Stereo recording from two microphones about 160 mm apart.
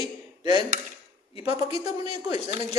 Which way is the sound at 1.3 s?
40° left (ahead or behind).